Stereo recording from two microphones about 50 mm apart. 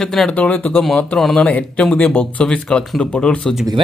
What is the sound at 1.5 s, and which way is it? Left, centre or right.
Speech, left.